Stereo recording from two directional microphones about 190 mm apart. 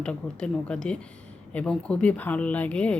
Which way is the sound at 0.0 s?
5° left (ahead or behind).